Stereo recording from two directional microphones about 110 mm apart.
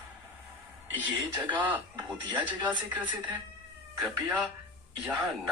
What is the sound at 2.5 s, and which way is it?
Speech, 15° right (ahead or behind).